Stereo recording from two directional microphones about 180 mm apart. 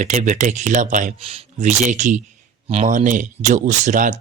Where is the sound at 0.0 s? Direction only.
45° right (ahead or behind).